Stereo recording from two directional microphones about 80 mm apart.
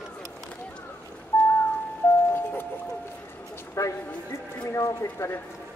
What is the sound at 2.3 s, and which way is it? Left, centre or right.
Music, left.